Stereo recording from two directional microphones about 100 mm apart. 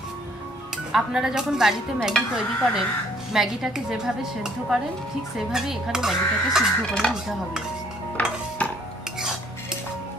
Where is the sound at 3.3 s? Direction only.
5° right (ahead or behind).